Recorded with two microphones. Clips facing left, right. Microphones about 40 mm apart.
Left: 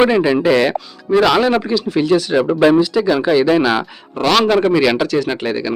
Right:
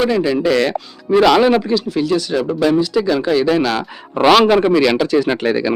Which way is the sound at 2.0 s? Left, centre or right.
Centre.